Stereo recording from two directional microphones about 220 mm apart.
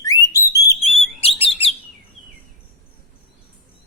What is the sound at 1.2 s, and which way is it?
Bird, 25° left (ahead or behind).